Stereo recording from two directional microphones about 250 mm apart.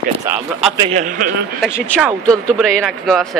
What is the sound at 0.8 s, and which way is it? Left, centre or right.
Speech, right.